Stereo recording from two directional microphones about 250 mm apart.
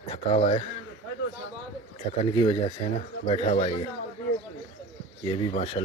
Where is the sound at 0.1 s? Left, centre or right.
Left.